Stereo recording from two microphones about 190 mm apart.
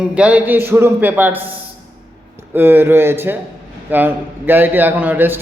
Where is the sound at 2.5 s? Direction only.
10° right (ahead or behind).